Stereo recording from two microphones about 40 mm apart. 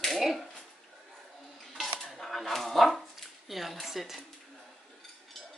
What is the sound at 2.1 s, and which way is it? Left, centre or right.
Speech, centre.